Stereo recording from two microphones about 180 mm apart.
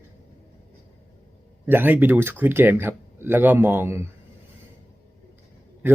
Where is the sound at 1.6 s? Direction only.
10° right (ahead or behind).